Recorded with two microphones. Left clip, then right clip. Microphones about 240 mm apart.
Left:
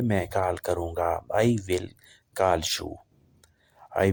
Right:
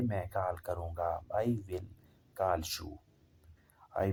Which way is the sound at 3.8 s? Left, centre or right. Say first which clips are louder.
Left 9 dB; left.